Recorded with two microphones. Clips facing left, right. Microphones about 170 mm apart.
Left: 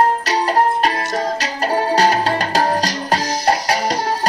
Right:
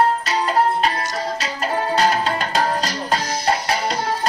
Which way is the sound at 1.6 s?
40° left (ahead or behind).